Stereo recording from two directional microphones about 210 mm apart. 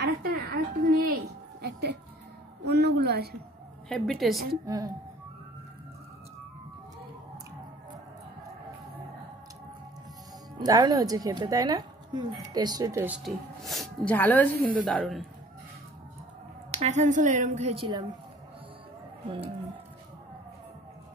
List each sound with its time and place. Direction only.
0.0 s a sound: 50° right (ahead or behind)
2.6 s a woman's voice: 50° right (ahead or behind)
3.9 s a woman's voice: centre (ahead or behind)
4.6 s speech: 15° right (ahead or behind)
10.6 s speech: 20° right (ahead or behind)
13.2 s a woman's voice: centre (ahead or behind)
16.7 s a woman's voice: 35° right (ahead or behind)
19.2 s speech: 25° right (ahead or behind)